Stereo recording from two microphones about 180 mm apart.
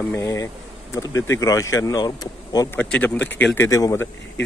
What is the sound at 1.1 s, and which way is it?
Speech, 90° left.